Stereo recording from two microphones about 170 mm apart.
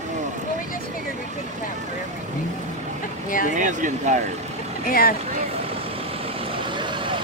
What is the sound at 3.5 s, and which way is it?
Speech, 50° right (ahead or behind).